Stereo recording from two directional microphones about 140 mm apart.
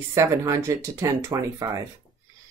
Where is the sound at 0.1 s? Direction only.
20° right (ahead or behind).